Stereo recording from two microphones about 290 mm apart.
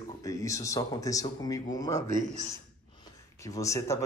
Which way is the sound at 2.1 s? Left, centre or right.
Right.